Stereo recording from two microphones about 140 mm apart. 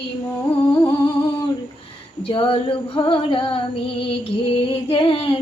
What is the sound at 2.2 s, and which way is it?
Female singing, 40° left (ahead or behind).